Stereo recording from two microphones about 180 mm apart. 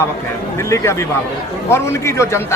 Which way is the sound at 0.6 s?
15° left (ahead or behind).